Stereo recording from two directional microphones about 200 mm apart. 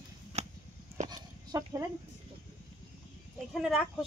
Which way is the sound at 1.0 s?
20° right (ahead or behind).